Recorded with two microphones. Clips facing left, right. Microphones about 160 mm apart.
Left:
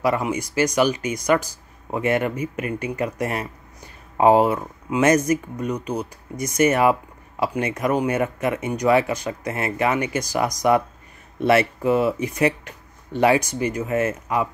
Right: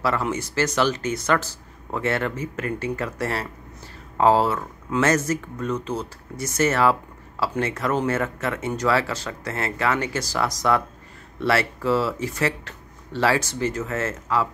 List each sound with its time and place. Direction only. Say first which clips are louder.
0.0 s speech: left 2 dB; 15° left (ahead or behind)